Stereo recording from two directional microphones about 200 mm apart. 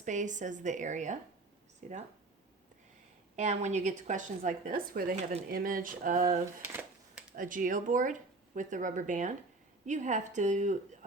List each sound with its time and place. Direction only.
0.0 s speech: 40° right (ahead or behind)
3.3 s speech: 35° right (ahead or behind)
5.1 s speech: 30° right (ahead or behind)
5.5 s speech: 45° right (ahead or behind)
6.7 s a sound: 10° right (ahead or behind)
7.3 s speech: 45° right (ahead or behind)